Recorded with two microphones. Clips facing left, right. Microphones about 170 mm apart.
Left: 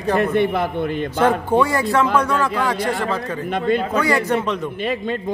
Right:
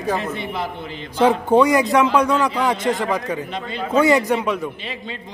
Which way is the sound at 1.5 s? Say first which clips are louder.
Right 3 dB; 20° right (ahead or behind).